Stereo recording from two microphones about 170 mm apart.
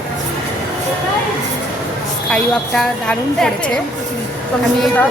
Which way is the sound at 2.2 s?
5° left (ahead or behind).